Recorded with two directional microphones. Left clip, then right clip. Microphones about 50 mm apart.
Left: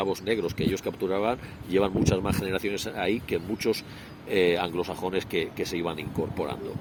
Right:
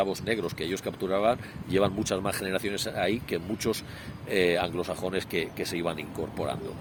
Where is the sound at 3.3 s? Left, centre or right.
Right.